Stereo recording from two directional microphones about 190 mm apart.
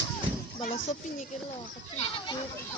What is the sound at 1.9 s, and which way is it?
Goat, 30° left (ahead or behind).